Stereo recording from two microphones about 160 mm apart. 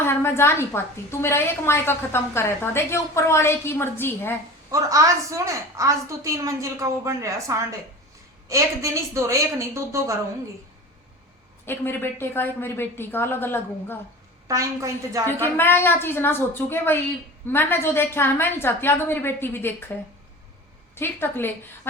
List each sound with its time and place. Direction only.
0.0 s a woman's voice: 15° left (ahead or behind)
4.7 s a woman's voice: 20° right (ahead or behind)
11.6 s a woman's voice: 15° left (ahead or behind)
14.4 s a woman's voice: 20° right (ahead or behind)
15.5 s a woman's voice: 15° left (ahead or behind)
20.9 s a woman's voice: 15° left (ahead or behind)